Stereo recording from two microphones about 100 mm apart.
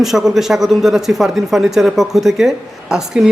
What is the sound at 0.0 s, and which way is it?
Speech, 5° right (ahead or behind).